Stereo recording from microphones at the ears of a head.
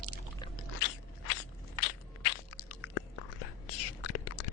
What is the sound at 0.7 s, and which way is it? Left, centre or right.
Scrape, left.